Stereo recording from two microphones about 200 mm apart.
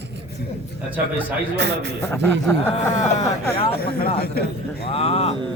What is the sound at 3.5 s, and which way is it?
Speech, 30° left (ahead or behind).